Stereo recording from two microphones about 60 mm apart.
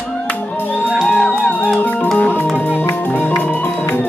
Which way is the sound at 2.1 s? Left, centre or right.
Left.